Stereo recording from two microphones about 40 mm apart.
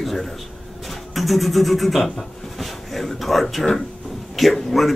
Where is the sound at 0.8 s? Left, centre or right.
Centre.